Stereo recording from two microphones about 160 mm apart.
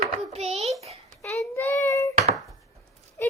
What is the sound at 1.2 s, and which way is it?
Speech, 10° left (ahead or behind).